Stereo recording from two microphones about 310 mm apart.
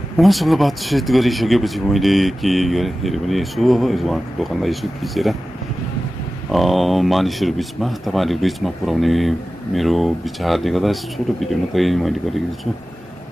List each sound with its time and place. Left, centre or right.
0.2 s speech: centre
6.5 s speech: centre